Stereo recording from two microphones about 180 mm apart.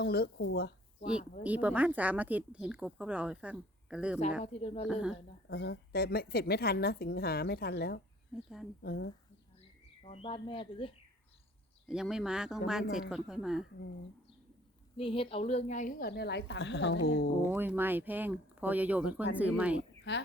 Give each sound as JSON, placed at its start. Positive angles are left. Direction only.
{"t": 0.0, "sound": "speech", "side_deg": 60}
{"t": 1.5, "sound": "speech", "side_deg": -10}
{"t": 4.4, "sound": "speech", "side_deg": 35}
{"t": 4.9, "sound": "speech", "side_deg": -5}
{"t": 5.5, "sound": "speech", "side_deg": 65}
{"t": 10.0, "sound": "speech", "side_deg": 35}
{"t": 11.9, "sound": "speech", "side_deg": -5}
{"t": 14.9, "sound": "speech", "side_deg": 30}
{"t": 17.4, "sound": "speech", "side_deg": -10}